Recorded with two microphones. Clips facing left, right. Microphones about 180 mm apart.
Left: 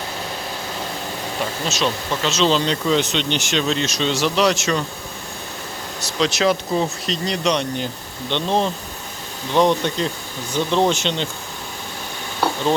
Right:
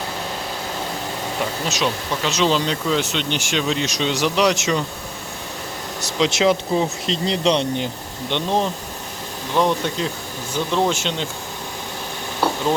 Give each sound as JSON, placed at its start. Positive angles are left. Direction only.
{"t": 1.7, "sound": "speech", "side_deg": -15}
{"t": 6.0, "sound": "speech", "side_deg": -20}
{"t": 8.3, "sound": "speech", "side_deg": -15}
{"t": 9.6, "sound": "speech", "side_deg": -5}